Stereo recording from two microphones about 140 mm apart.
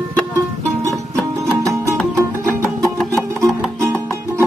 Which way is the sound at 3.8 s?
15° right (ahead or behind).